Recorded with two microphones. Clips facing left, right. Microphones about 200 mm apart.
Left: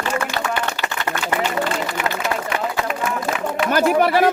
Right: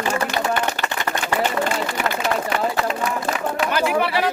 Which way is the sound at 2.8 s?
30° right (ahead or behind).